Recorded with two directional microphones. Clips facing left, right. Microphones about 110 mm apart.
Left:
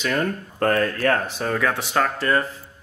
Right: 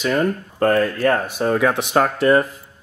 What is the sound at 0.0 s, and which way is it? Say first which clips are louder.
Speech: right 4 dB; 10° right (ahead or behind).